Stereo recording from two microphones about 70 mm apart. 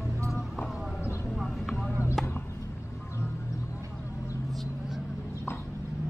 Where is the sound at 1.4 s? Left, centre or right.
Centre.